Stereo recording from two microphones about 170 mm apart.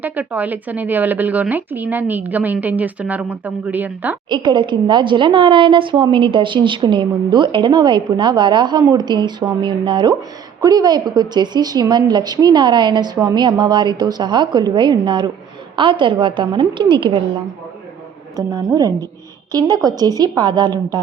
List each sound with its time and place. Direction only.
0.0 s speech: 10° right (ahead or behind)
4.3 s a woman's voice: 25° right (ahead or behind)
18.3 s a woman's voice: 20° right (ahead or behind)